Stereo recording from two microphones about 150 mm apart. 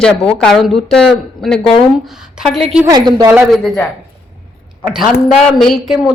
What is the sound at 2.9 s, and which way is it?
Speech, 25° right (ahead or behind).